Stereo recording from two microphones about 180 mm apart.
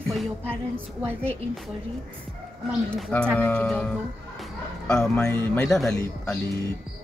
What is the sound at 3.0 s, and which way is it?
A man's voice, 5° left (ahead or behind).